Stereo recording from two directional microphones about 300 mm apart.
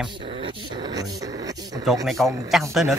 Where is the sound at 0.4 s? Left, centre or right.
Centre.